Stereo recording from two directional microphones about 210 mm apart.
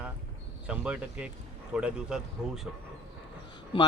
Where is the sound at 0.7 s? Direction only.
5° right (ahead or behind).